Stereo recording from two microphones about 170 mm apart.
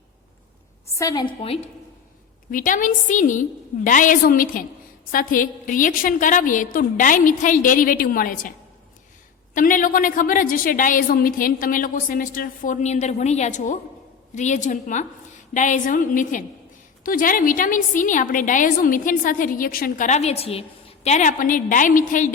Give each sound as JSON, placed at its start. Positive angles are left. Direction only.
{"t": 0.9, "sound": "a woman's voice", "side_deg": 20}
{"t": 2.5, "sound": "a woman's voice", "side_deg": 50}
{"t": 9.6, "sound": "a woman's voice", "side_deg": 50}